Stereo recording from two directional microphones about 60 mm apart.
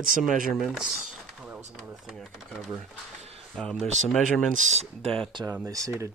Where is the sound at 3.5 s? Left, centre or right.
Centre.